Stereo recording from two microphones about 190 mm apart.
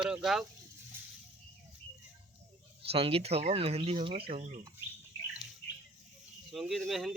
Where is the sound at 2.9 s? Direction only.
30° right (ahead or behind).